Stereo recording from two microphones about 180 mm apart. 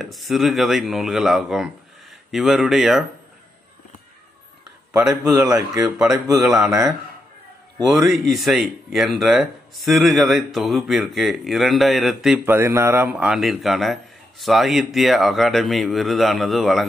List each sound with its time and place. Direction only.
0.0 s speech: centre (ahead or behind)
4.9 s speech: 5° right (ahead or behind)
5.6 s speech: 20° right (ahead or behind)
5.9 s speech: 5° right (ahead or behind)
7.8 s speech: centre (ahead or behind)
12.5 s speech: 15° right (ahead or behind); by 16.8 s centre (ahead or behind)